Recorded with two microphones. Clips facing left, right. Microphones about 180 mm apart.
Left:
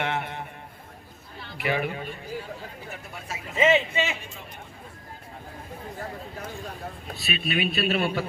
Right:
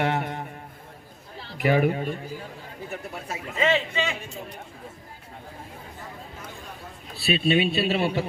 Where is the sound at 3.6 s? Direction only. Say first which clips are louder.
Left 2 dB; 20° left (ahead or behind).